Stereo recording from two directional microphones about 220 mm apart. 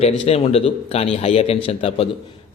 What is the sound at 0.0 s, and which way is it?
A man's voice, 30° left (ahead or behind).